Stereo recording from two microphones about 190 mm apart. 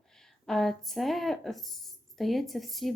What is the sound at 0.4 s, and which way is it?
A woman's voice, centre (ahead or behind).